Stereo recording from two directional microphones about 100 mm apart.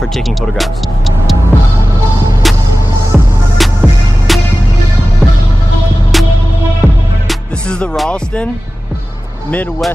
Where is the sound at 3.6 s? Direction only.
Centre (ahead or behind).